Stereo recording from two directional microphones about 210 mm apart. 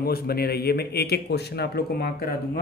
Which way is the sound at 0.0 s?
50° left (ahead or behind).